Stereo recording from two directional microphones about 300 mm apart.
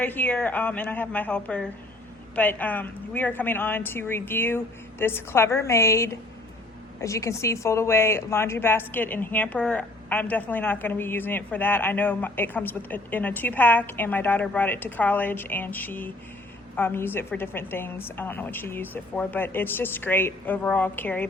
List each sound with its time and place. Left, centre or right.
0.0 s a woman's voice: centre